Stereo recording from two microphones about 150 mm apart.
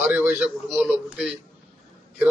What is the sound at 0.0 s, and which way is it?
A man's voice, 10° right (ahead or behind).